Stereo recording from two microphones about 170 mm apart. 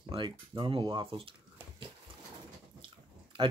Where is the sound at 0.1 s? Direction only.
30° right (ahead or behind).